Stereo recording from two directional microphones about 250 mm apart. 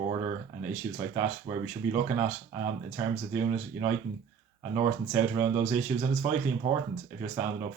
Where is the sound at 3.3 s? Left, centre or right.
Centre.